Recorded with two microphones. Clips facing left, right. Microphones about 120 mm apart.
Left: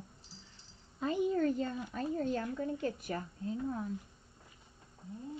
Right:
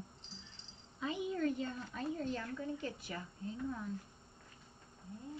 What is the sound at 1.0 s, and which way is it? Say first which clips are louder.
A woman's voice: left 5 dB; 45° left (ahead or behind).